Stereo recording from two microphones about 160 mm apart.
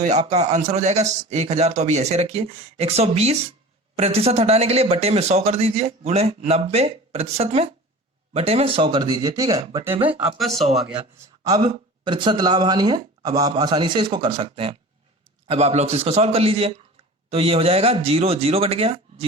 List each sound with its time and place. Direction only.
0.0 s a man's voice: 45° right (ahead or behind); by 9.6 s 20° right (ahead or behind)
10.3 s speech: centre (ahead or behind)
11.4 s a man's voice: 30° right (ahead or behind)